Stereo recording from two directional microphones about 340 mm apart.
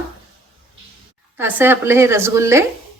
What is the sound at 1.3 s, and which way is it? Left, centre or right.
A woman's voice, centre.